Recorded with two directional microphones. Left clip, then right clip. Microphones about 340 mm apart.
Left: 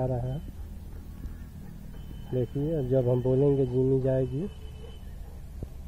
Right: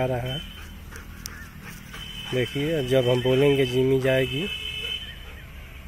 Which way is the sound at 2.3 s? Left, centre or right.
Centre.